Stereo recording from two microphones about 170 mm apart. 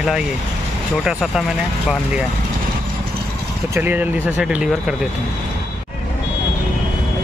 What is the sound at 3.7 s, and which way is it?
Speech, 10° right (ahead or behind).